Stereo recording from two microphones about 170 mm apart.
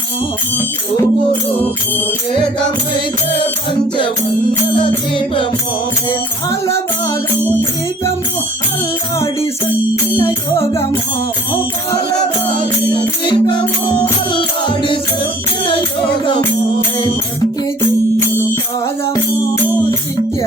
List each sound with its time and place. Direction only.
4.7 s music: 30° left (ahead or behind)
6.5 s music: 15° left (ahead or behind)
10.5 s music: 35° left (ahead or behind)
13.2 s music: 30° left (ahead or behind)